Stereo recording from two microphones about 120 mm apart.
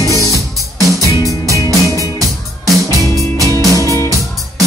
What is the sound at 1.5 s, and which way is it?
Music, 25° right (ahead or behind).